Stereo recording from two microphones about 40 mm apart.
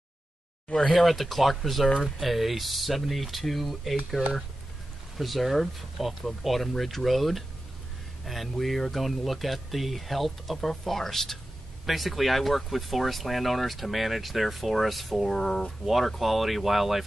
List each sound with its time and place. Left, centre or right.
0.9 s speech: centre
1.9 s speech: centre
2.1 s speech: centre
5.1 s speech: centre
15.8 s speech: centre